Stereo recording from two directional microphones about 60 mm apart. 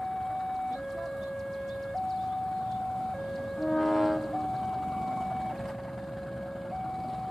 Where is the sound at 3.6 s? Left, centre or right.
Centre.